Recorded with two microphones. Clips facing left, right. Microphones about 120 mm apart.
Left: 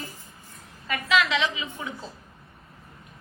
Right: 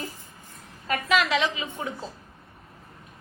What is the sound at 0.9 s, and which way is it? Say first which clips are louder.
A woman's voice: right 1 dB; 40° right (ahead or behind).